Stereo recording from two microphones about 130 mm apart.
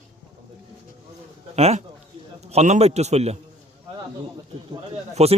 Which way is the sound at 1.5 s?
55° right (ahead or behind).